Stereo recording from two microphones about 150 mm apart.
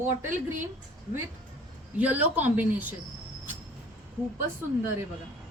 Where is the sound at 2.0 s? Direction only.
10° right (ahead or behind).